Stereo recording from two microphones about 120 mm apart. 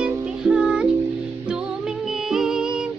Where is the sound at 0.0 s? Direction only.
5° right (ahead or behind).